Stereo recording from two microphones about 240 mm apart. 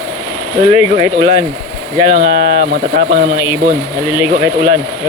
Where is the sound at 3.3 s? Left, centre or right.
Centre.